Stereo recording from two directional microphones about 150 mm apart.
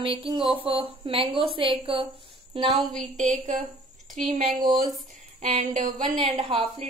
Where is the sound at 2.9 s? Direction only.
50° right (ahead or behind).